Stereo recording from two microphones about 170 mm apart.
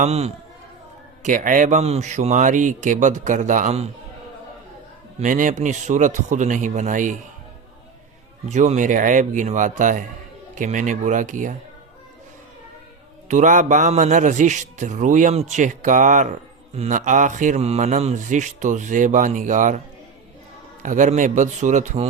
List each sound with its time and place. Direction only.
0.0 s a man's voice: 40° right (ahead or behind)
1.2 s a man's voice: 50° right (ahead or behind)
5.2 s a man's voice: 50° right (ahead or behind)
8.4 s a man's voice: 45° right (ahead or behind)
13.2 s a man's voice: 45° right (ahead or behind)
20.8 s a man's voice: 50° right (ahead or behind)